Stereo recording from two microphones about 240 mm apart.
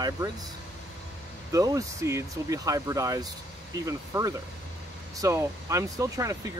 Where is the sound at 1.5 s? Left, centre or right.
Centre.